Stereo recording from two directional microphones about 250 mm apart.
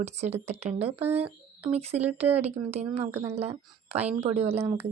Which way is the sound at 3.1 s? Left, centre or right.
Centre.